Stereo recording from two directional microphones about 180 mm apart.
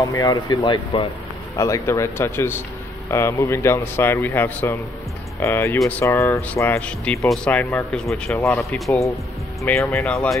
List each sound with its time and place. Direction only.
0.0 s speech: 20° left (ahead or behind)
1.6 s a man's voice: 15° left (ahead or behind); by 9.0 s centre (ahead or behind)
9.6 s a man's voice: 15° left (ahead or behind)
10.1 s speech: centre (ahead or behind)